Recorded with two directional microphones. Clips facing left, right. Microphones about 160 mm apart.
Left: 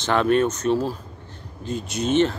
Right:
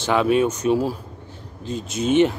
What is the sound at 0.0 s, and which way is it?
Speech, 5° right (ahead or behind).